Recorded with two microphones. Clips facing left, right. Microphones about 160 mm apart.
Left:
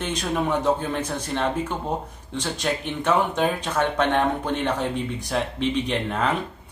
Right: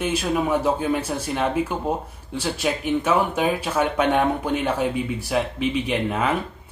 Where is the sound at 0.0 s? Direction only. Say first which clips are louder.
Right 3 dB; 5° right (ahead or behind).